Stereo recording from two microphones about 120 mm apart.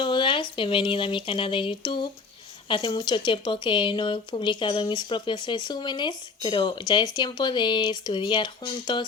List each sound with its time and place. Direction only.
0.0 s speech: 40° left (ahead or behind)